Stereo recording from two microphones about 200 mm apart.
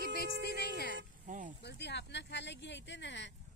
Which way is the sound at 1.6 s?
60° left (ahead or behind).